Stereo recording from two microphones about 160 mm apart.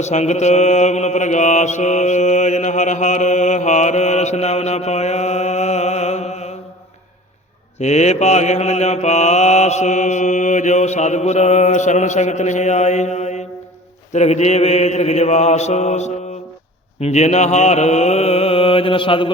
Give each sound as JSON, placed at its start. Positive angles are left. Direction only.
{"t": 0.0, "sound": "mantra", "side_deg": 45}
{"t": 7.8, "sound": "mantra", "side_deg": 45}